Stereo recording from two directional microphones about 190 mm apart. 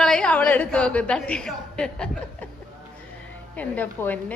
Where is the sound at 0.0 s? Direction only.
5° left (ahead or behind).